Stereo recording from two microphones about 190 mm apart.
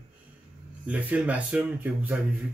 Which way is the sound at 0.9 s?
10° right (ahead or behind).